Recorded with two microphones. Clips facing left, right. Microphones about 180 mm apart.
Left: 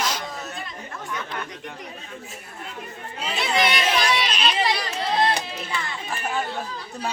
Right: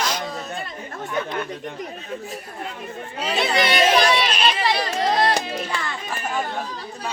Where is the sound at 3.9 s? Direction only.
55° right (ahead or behind).